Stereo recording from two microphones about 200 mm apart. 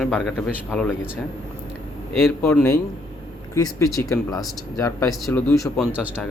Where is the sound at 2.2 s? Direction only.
10° left (ahead or behind).